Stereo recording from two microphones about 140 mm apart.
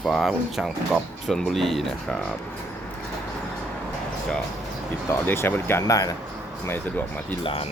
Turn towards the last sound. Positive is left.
turn(degrees=10)  # may be behind; listen again after turning